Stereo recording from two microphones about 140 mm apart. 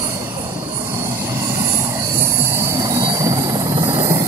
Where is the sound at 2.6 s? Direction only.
25° right (ahead or behind).